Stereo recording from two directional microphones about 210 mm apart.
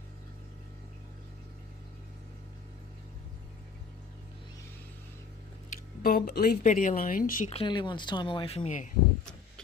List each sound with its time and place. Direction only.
5.7 s speech: 45° left (ahead or behind)
7.5 s speech: 20° left (ahead or behind)